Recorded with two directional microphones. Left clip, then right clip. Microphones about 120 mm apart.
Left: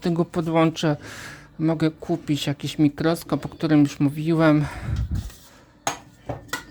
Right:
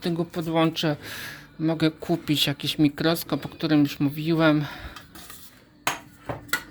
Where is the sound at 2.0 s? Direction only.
10° left (ahead or behind); by 4.9 s 30° left (ahead or behind).